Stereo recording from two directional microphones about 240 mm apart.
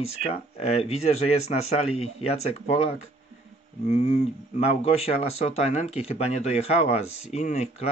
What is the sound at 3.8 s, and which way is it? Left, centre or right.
Speech, left.